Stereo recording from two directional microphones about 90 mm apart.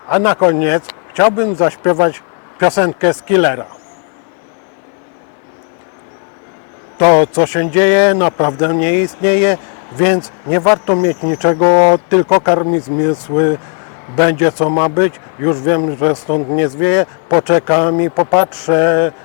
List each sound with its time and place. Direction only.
0.1 s speech: 20° left (ahead or behind)
7.0 s a man's voice: 15° left (ahead or behind)